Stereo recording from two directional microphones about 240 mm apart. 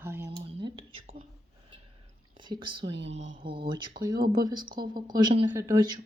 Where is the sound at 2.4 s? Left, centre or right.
Centre.